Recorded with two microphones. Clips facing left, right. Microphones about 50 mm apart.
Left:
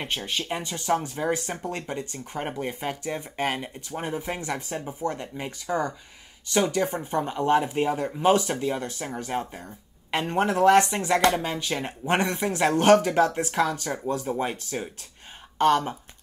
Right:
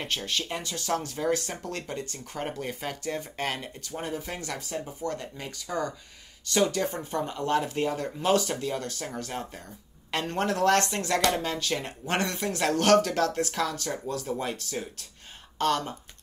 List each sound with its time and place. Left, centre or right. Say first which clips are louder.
0.0 s speech: left 1 dB; centre